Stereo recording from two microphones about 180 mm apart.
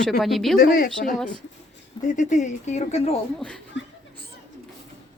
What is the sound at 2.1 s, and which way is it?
Speech, 45° left (ahead or behind).